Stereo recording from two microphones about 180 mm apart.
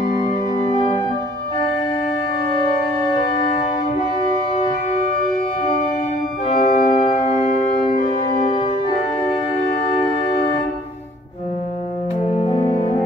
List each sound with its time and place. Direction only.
0.2 s organ: 35° left (ahead or behind)
6.4 s organ: 40° left (ahead or behind)
8.5 s organ: 30° left (ahead or behind)
12.3 s music: 35° left (ahead or behind)